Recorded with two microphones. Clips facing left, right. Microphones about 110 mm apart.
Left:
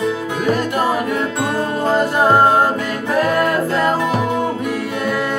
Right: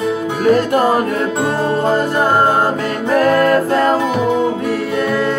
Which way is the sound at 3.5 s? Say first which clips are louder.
Right 4 dB; 45° right (ahead or behind).